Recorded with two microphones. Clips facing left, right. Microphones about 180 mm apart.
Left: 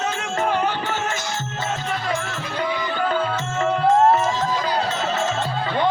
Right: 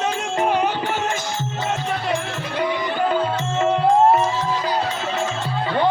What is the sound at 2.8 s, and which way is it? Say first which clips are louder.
Music: right 1 dB; 20° right (ahead or behind).